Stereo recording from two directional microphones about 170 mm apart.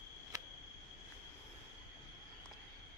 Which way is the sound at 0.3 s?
20° right (ahead or behind).